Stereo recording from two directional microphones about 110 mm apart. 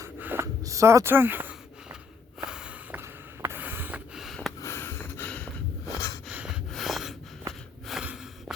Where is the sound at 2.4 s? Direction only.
5° right (ahead or behind).